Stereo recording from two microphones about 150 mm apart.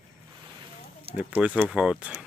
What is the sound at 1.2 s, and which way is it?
Speech, 10° right (ahead or behind).